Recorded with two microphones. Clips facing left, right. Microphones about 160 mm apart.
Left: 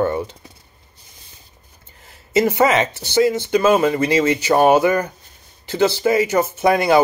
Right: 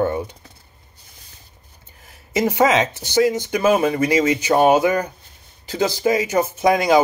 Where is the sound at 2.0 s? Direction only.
15° right (ahead or behind).